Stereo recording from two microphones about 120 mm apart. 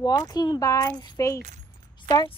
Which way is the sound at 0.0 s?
35° left (ahead or behind).